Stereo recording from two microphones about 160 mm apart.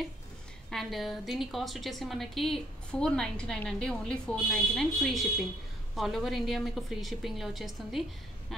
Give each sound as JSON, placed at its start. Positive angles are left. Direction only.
{"t": 0.7, "sound": "a woman's voice", "side_deg": 0}